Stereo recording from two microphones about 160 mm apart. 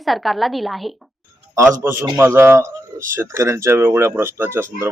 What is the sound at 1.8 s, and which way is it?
Speech, 15° right (ahead or behind).